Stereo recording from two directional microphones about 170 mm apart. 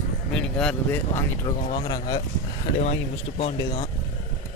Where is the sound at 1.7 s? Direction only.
25° left (ahead or behind).